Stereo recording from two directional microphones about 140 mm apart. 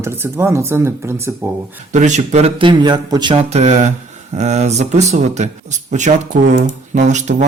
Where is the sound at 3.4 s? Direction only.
55° right (ahead or behind).